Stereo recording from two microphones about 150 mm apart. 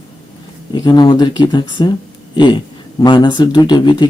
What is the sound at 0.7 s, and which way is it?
Speech, 30° left (ahead or behind).